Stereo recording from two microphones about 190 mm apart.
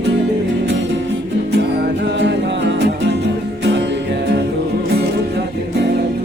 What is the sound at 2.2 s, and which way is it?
Music, 65° right (ahead or behind).